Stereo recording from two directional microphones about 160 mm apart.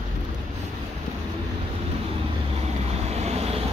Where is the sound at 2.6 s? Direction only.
40° right (ahead or behind).